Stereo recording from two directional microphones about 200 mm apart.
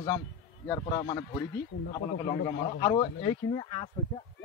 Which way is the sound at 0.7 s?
20° left (ahead or behind).